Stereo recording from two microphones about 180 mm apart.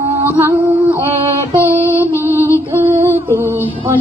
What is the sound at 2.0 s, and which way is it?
Music, 10° right (ahead or behind).